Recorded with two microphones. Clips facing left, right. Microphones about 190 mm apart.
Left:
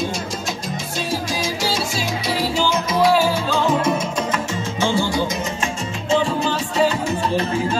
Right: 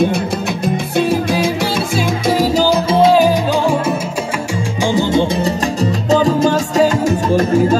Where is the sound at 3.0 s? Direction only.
20° right (ahead or behind).